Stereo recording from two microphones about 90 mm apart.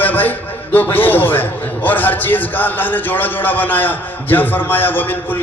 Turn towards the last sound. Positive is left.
turn(degrees=20)  # may be behind; listen again after turning